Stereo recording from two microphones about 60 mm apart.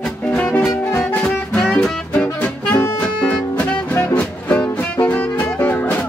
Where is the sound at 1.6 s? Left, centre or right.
Centre.